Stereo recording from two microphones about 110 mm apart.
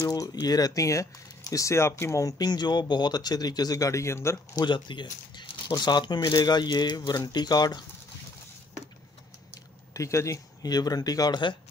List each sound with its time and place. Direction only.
0.1 s speech: 35° left (ahead or behind)
4.6 s speech: 45° left (ahead or behind)
9.9 s speech: 30° left (ahead or behind)